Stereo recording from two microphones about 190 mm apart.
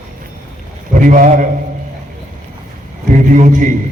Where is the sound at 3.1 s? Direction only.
40° right (ahead or behind).